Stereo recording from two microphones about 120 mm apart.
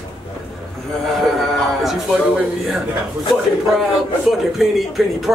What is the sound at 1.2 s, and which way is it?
Speech, centre (ahead or behind).